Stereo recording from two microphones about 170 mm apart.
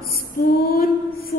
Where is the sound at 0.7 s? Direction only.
60° left (ahead or behind).